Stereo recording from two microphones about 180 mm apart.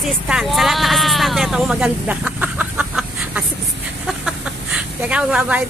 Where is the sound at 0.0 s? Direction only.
Centre (ahead or behind).